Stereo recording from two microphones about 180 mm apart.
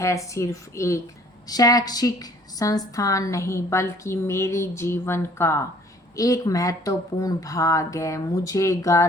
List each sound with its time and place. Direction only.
0.0 s a woman's voice: 15° left (ahead or behind)